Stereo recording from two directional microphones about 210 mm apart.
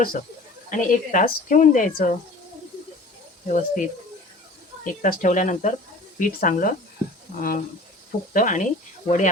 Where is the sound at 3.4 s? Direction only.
35° left (ahead or behind).